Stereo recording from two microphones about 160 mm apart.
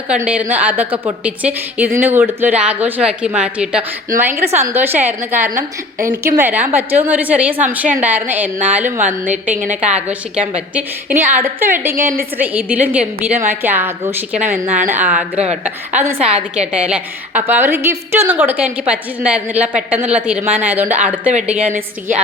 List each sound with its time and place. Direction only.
0.2 s a woman's voice: 10° right (ahead or behind)
16.2 s a woman's voice: 45° right (ahead or behind)
16.7 s a woman's voice: 5° right (ahead or behind)